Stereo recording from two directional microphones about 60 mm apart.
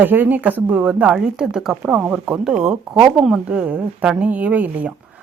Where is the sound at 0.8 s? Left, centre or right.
Centre.